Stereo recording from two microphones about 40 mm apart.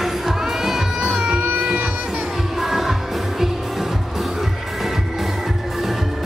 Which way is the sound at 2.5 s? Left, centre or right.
Centre.